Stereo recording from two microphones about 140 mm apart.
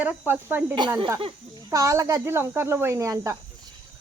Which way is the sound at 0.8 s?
35° right (ahead or behind).